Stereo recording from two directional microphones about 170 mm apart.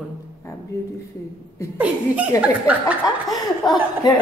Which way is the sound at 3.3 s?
25° left (ahead or behind).